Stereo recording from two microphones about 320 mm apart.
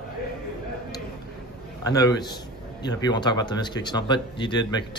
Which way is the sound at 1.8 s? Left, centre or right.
Centre.